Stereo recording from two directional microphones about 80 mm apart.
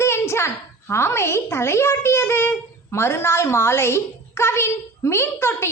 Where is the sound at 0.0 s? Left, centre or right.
Left.